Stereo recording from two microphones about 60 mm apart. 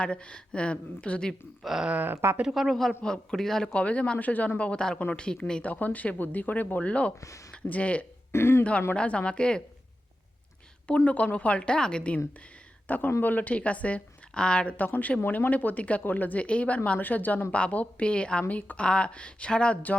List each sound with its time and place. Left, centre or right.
0.0 s a woman's voice: centre
1.6 s speech: centre
1.9 s speech: right
2.6 s a man's voice: centre
3.7 s a woman's voice: left
7.2 s speech: left
7.5 s speech: left
8.3 s speech: left
9.0 s a woman's voice: centre
10.8 s a woman's voice: left
12.9 s a woman's voice: left